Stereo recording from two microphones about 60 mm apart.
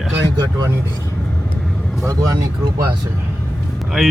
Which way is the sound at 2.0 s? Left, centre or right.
Right.